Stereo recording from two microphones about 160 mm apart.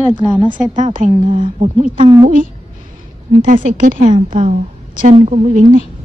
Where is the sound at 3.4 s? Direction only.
55° right (ahead or behind).